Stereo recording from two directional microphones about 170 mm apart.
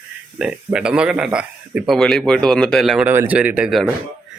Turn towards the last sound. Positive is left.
turn(degrees=-5)  # may be behind; listen again after turning